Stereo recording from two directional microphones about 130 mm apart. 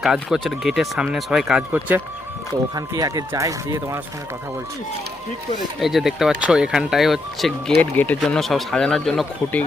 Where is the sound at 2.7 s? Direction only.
30° right (ahead or behind).